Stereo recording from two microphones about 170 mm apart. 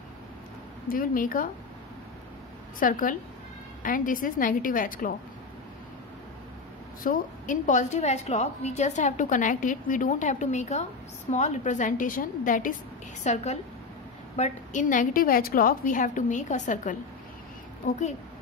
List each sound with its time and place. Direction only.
0.8 s a woman's voice: 55° left (ahead or behind)
2.8 s a woman's voice: 55° left (ahead or behind)
7.0 s a woman's voice: 50° left (ahead or behind)
13.2 s a woman's voice: 40° left (ahead or behind)